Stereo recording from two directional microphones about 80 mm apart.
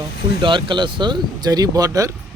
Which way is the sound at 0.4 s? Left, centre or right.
Right.